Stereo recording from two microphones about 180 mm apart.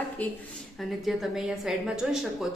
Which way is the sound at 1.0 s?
Centre (ahead or behind).